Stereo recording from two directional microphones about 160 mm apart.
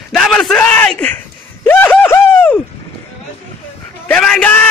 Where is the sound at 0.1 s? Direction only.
5° left (ahead or behind).